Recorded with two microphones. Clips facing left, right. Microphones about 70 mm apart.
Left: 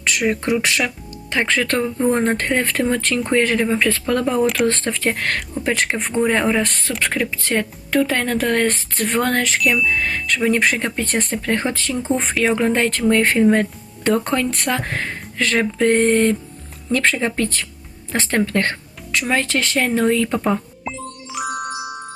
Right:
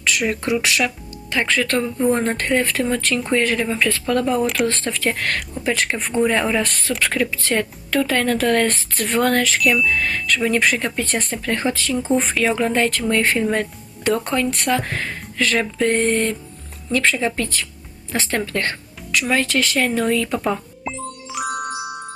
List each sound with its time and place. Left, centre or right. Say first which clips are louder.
0.0 s speech: left 1 dB; left
1.5 s speech: even; left
2.0 s speech: left 2 dB; left
2.6 s speech: left 1 dB; left
6.1 s speech: right 1 dB; centre
6.6 s speech: even; left
9.6 s speech: right 1 dB; centre
9.8 s speech: even; left
15.8 s speech: left 4 dB; left
18.1 s speech: left 3 dB; left
20.8 s music: right 1 dB; centre